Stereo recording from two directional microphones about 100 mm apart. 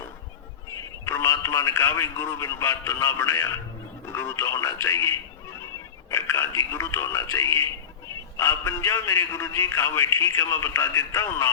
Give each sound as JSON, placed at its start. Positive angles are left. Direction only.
{"t": 1.0, "sound": "a man's voice", "side_deg": 25}